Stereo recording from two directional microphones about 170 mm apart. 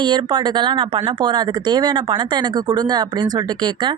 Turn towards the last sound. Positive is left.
turn(degrees=-25)  # may be behind; listen again after turning